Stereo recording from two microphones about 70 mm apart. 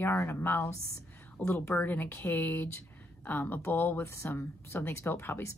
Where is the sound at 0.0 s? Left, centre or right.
Left.